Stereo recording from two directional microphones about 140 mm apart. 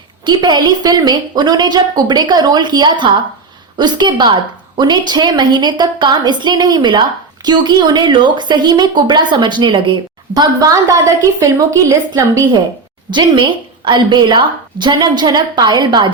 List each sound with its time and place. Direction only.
0.3 s a woman's voice: 30° right (ahead or behind)